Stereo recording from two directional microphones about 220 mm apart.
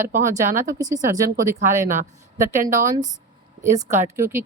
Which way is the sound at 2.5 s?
35° right (ahead or behind).